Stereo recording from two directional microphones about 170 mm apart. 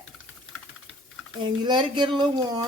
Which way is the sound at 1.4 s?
25° right (ahead or behind).